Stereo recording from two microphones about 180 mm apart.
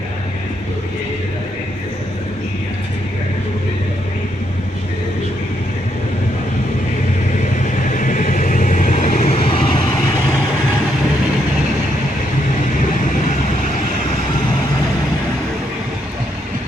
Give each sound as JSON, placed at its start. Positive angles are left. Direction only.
{"t": 7.9, "sound": "vehicle", "side_deg": 45}